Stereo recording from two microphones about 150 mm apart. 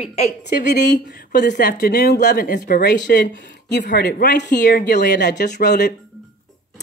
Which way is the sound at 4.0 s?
90° left.